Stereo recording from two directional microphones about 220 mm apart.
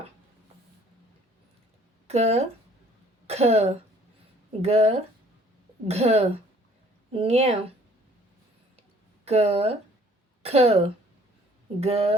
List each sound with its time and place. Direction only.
2.0 s speech: 30° right (ahead or behind)
9.2 s speech: 30° right (ahead or behind)